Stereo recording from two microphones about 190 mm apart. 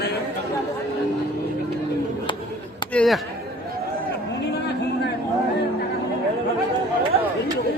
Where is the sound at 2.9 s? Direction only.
Centre (ahead or behind).